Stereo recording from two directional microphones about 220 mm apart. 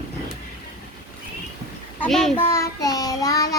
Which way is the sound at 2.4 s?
10° left (ahead or behind).